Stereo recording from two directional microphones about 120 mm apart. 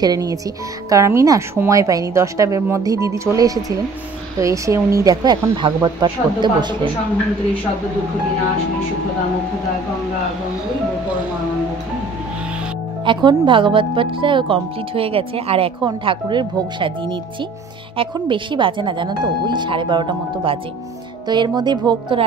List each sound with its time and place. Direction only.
0.0 s a woman's voice: 30° right (ahead or behind)
13.0 s speech: 40° right (ahead or behind)